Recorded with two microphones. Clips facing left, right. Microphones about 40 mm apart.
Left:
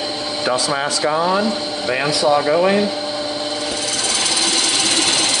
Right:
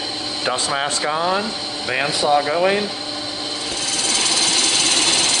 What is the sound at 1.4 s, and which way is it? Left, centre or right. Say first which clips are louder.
Speech: left 5 dB; centre.